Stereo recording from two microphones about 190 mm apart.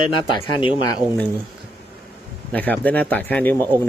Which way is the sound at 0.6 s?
25° left (ahead or behind).